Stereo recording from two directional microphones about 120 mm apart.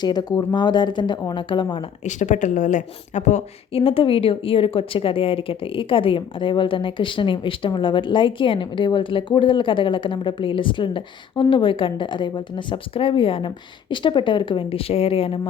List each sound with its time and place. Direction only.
0.0 s speech: 35° left (ahead or behind)
2.0 s speech: 90° left; by 3.4 s 75° left (ahead or behind)
3.8 s a woman's voice: 50° left (ahead or behind)